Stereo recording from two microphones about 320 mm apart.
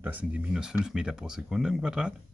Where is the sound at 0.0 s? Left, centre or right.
Centre.